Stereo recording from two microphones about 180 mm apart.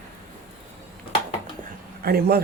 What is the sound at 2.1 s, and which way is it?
Speech, 55° right (ahead or behind).